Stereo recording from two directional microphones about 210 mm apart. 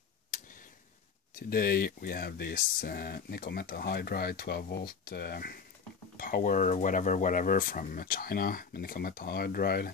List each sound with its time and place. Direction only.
1.5 s speech: 45° left (ahead or behind)